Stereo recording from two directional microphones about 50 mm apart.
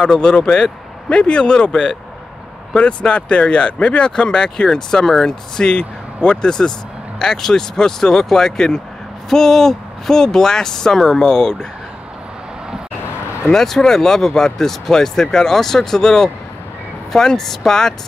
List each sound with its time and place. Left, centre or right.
0.0 s speech: centre
13.5 s speech: centre